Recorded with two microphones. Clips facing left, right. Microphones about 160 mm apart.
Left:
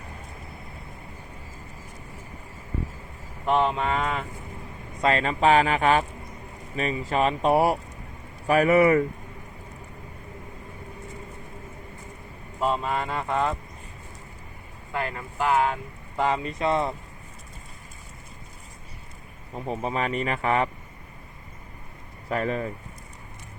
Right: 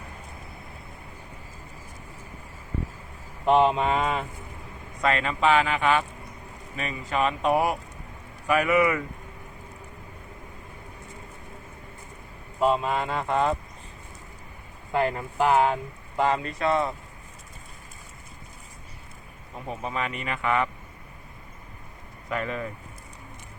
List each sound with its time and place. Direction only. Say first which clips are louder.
3.6 s mantra: right 3 dB; 15° right (ahead or behind)
4.9 s speech: left 2 dB; 30° left (ahead or behind)
12.5 s speech: right 2 dB; 5° right (ahead or behind)
14.9 s speech: right 5 dB; 25° right (ahead or behind)
16.1 s speech: right 1 dB; 5° left (ahead or behind)
16.6 s speech: left 1 dB; 25° left (ahead or behind)
19.8 s speech: left 4 dB; 35° left (ahead or behind)
22.3 s speech: left 3 dB; 35° left (ahead or behind)